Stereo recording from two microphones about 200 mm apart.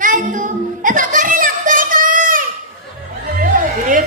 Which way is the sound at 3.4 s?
40° right (ahead or behind).